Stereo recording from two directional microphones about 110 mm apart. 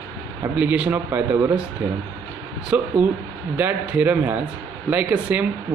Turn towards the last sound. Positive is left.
turn(degrees=-10)  # may be behind; listen again after turning